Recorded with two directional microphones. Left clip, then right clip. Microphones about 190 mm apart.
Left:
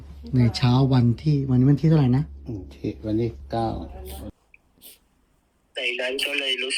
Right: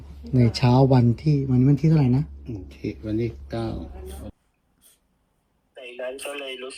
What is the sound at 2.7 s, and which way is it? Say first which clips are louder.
Speech: left 2 dB; 25° left (ahead or behind).